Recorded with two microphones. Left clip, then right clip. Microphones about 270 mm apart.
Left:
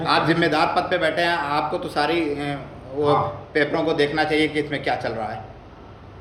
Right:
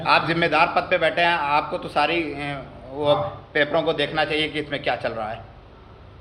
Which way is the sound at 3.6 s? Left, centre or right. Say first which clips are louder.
Even; centre.